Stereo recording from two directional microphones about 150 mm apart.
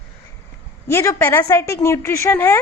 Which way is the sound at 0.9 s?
20° left (ahead or behind).